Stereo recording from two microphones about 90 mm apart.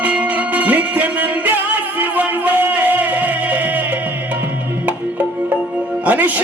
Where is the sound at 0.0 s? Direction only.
15° right (ahead or behind).